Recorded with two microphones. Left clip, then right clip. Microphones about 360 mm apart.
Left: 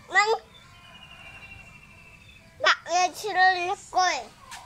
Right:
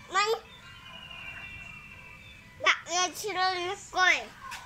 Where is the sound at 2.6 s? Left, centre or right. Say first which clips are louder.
Left 4 dB; left.